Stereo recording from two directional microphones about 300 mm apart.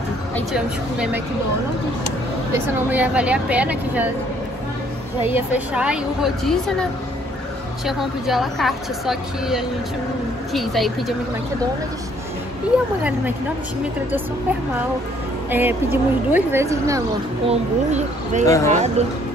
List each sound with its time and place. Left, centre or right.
0.5 s a woman's voice: centre
2.5 s a woman's voice: centre
5.2 s a woman's voice: centre
12.7 s a woman's voice: centre
15.5 s speech: centre
17.5 s speech: right
18.4 s speech: centre
18.7 s speech: right